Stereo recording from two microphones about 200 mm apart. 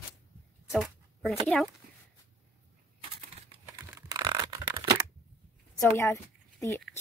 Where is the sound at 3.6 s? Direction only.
15° right (ahead or behind).